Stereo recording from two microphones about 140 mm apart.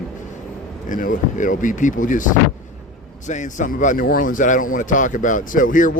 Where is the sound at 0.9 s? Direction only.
70° left (ahead or behind).